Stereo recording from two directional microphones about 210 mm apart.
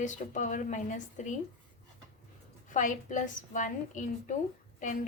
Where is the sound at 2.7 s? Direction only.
35° left (ahead or behind).